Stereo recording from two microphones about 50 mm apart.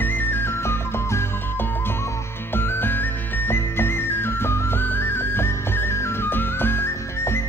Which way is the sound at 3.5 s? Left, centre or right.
Left.